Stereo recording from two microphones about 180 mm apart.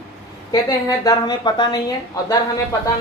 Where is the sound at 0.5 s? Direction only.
20° left (ahead or behind).